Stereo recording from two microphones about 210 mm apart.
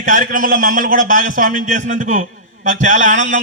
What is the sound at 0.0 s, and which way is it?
A man's voice, 40° right (ahead or behind).